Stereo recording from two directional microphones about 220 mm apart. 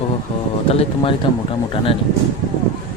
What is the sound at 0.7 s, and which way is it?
Speech, 25° left (ahead or behind).